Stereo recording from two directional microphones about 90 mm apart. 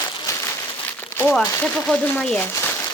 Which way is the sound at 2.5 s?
30° left (ahead or behind).